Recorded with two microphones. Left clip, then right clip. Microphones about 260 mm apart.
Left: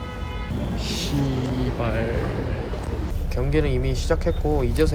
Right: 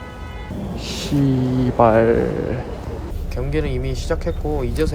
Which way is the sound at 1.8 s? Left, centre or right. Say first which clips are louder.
Right 15 dB; right.